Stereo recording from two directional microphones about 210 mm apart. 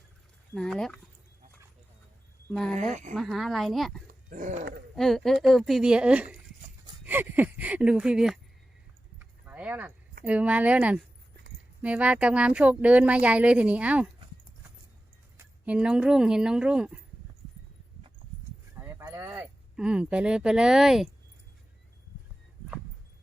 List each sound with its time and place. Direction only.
0.5 s speech: 5° left (ahead or behind)
2.5 s speech: 5° left (ahead or behind)
2.9 s horse: 35° right (ahead or behind)
3.2 s speech: centre (ahead or behind)
4.3 s horse: 40° right (ahead or behind)
4.9 s speech: centre (ahead or behind)
9.1 s keys jangling: 5° right (ahead or behind)
10.2 s speech: 5° right (ahead or behind)
15.4 s speech: 5° right (ahead or behind)
18.7 s a sound: 10° right (ahead or behind)